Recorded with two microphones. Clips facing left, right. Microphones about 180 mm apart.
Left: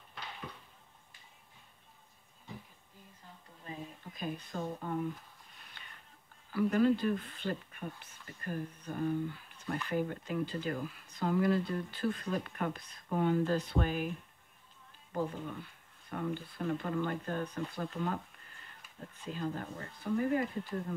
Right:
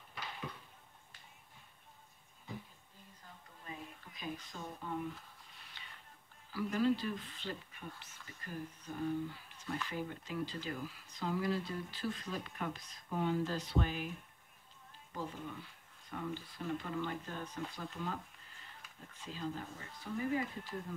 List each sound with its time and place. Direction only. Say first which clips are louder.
4.1 s speech: left 5 dB; 55° left (ahead or behind)
5.8 s a sound: left 1 dB; 55° left (ahead or behind)
6.5 s speech: left 5 dB; 55° left (ahead or behind)
15.1 s speech: left 7 dB; 50° left (ahead or behind)